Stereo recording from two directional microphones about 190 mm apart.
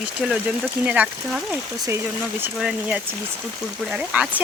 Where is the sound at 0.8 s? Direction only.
5° right (ahead or behind).